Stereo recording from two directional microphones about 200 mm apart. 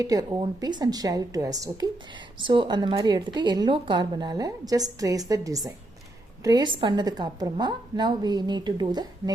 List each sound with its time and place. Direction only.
0.0 s a woman's voice: 15° right (ahead or behind)